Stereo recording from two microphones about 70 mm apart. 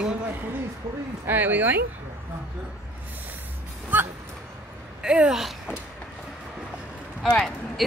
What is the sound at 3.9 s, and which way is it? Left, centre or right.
Speech, right.